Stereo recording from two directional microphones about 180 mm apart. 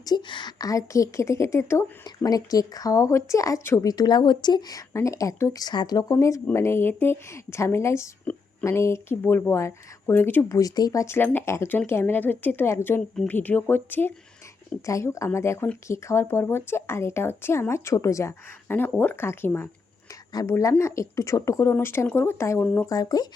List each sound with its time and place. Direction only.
0.0 s a woman's voice: 25° left (ahead or behind)